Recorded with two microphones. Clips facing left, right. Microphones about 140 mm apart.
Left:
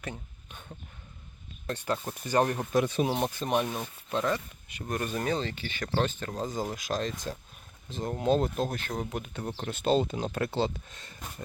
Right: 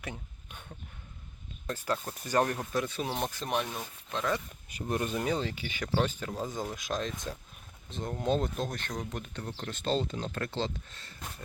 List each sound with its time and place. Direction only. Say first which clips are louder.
0.0 s a sound: left 2 dB; 15° right (ahead or behind)
1.6 s speech: left 2 dB; centre (ahead or behind)
2.7 s speech: left 8 dB; 20° left (ahead or behind)
3.2 s speech: left 4 dB; 5° left (ahead or behind)
4.9 s speech: even; 20° right (ahead or behind)
6.4 s speech: left 4 dB; centre (ahead or behind)